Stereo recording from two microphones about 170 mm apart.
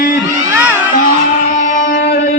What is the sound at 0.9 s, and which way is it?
Music, 50° left (ahead or behind).